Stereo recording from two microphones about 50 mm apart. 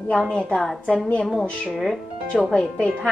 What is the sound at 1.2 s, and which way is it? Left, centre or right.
Speech, centre.